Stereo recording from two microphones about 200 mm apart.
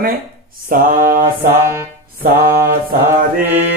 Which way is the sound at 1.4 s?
15° right (ahead or behind).